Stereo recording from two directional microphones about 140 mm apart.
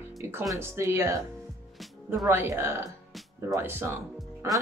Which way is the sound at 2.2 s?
20° right (ahead or behind).